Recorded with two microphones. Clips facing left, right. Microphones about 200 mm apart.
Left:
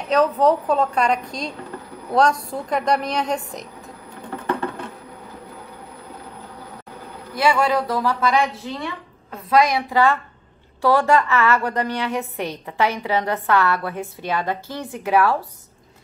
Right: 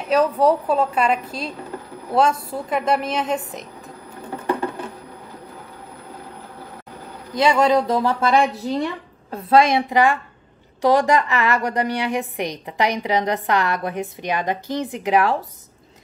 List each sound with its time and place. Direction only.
0.1 s a woman's voice: 10° right (ahead or behind)
7.3 s speech: 20° right (ahead or behind)
8.6 s a woman's voice: 40° right (ahead or behind)
9.3 s a woman's voice: 30° right (ahead or behind)